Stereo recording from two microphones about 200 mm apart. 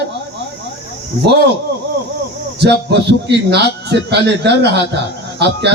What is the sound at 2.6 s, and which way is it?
A man's voice, 55° right (ahead or behind).